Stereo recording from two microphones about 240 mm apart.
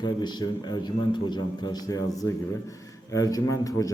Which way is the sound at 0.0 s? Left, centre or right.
Centre.